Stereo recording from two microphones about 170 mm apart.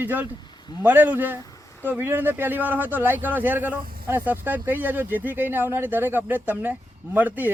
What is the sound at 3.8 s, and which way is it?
Speech, 60° right (ahead or behind).